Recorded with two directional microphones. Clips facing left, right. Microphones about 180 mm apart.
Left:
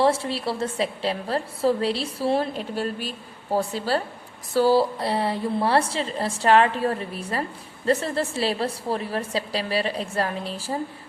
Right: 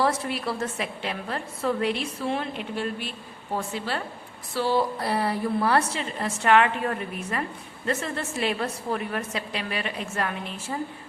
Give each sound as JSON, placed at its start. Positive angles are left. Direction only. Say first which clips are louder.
{"t": 0.0, "sound": "a woman's voice", "louder": "left 4 dB", "side_deg": 30}
{"t": 4.9, "sound": "a woman's voice", "louder": "left 1 dB", "side_deg": 25}